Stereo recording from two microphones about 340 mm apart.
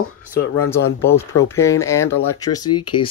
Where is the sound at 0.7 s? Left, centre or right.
Centre.